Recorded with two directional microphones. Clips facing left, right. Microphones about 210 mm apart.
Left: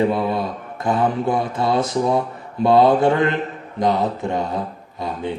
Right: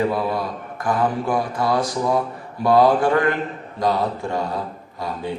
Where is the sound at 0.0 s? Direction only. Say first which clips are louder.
Left 2 dB; 25° left (ahead or behind).